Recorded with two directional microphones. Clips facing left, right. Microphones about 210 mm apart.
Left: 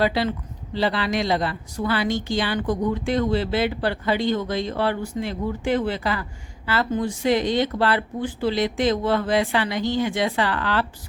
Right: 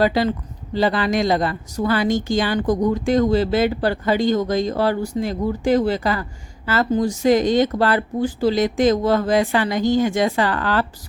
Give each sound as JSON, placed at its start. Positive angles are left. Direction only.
{"t": 0.0, "sound": "speech", "side_deg": -45}